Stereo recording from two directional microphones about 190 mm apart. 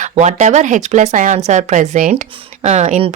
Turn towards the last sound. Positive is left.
turn(degrees=-35)  # may be behind; listen again after turning